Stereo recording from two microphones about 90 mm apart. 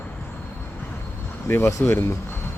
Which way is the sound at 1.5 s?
30° left (ahead or behind).